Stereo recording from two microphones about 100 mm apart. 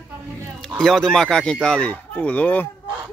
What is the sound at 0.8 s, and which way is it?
Speech, 5° left (ahead or behind).